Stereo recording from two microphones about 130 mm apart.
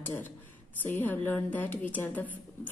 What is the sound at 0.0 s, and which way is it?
A woman's voice, 15° left (ahead or behind).